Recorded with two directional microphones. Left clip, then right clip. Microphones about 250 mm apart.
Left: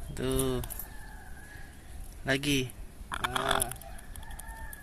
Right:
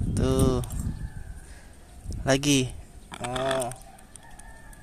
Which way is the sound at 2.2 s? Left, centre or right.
Centre.